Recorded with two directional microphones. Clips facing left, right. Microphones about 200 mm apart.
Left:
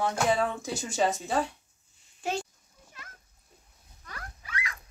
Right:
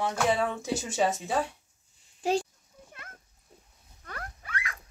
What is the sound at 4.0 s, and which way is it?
Rodents, 55° right (ahead or behind).